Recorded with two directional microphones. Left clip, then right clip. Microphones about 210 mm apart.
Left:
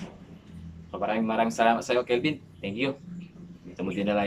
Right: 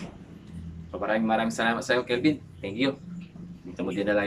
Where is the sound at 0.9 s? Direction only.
10° left (ahead or behind).